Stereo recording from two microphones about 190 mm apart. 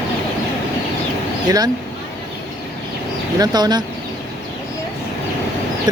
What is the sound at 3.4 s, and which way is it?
Speech, 20° right (ahead or behind).